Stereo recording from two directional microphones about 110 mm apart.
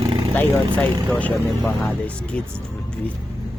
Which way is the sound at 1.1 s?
5° left (ahead or behind).